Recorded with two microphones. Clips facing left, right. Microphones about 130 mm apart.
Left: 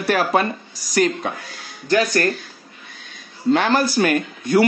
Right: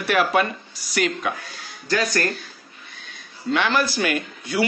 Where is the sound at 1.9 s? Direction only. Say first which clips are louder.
Left 5 dB; 25° left (ahead or behind).